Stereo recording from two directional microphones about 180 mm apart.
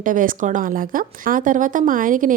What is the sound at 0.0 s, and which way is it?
Speech, 50° right (ahead or behind).